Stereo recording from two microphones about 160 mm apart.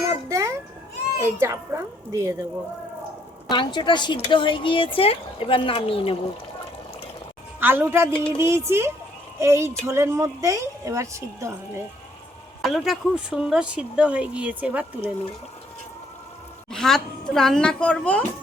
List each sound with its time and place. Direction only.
0.1 s children playing: 20° right (ahead or behind)
1.2 s speech: 15° right (ahead or behind)
3.5 s speech: 30° left (ahead or behind)
7.6 s speech: 15° right (ahead or behind)
12.6 s speech: centre (ahead or behind)
16.7 s a woman's voice: 5° left (ahead or behind)